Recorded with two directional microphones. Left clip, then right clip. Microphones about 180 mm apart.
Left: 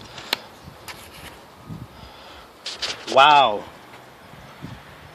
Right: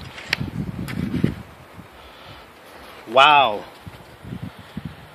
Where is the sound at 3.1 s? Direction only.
5° right (ahead or behind).